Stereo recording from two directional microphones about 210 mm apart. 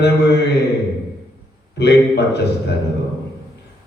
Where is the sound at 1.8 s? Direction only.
55° left (ahead or behind).